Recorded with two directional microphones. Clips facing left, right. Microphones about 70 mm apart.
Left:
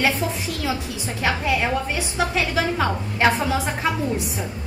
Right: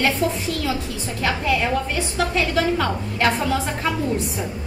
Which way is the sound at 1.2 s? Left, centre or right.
Centre.